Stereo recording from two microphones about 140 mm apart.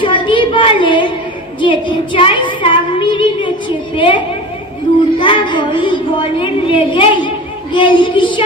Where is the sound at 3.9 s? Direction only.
40° left (ahead or behind).